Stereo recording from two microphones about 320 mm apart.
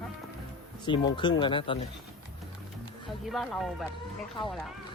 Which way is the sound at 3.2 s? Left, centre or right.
Centre.